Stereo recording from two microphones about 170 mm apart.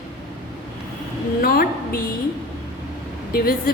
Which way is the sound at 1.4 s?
60° left (ahead or behind).